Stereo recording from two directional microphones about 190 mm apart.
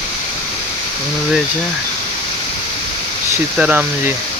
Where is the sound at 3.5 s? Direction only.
5° right (ahead or behind).